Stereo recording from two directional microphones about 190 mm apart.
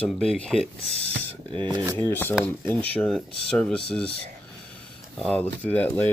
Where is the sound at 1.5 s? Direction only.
25° right (ahead or behind).